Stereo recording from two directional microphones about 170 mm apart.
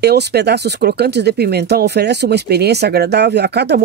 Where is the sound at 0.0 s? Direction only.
70° right (ahead or behind).